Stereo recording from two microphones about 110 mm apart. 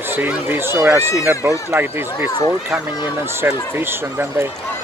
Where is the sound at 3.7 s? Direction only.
20° right (ahead or behind).